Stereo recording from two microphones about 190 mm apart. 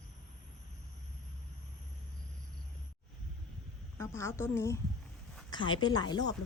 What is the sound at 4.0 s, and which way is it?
Speech, 15° left (ahead or behind).